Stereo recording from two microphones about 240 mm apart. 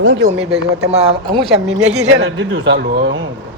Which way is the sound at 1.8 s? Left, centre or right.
Right.